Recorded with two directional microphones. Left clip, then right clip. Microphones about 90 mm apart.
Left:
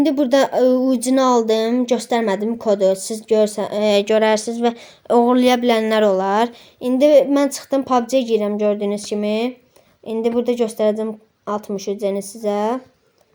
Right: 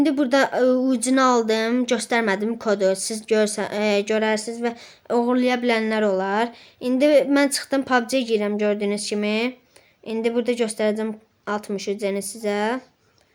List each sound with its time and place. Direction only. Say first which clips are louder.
0.0 s speech: left 3 dB; 30° left (ahead or behind)
4.3 s speech: left 6 dB; 50° left (ahead or behind)
5.8 s a woman's voice: left 6 dB; 30° left (ahead or behind)